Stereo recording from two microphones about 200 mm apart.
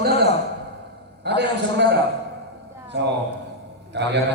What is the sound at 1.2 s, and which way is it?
Speech, 55° right (ahead or behind).